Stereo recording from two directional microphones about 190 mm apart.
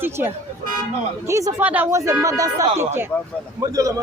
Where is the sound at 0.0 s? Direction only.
10° right (ahead or behind).